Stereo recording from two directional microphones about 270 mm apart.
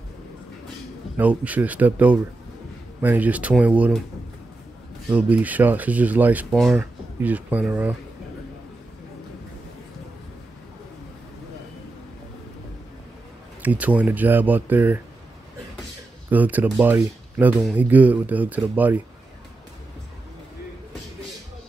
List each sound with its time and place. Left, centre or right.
1.1 s speech: centre
5.1 s speech: centre
13.6 s speech: centre
16.3 s speech: centre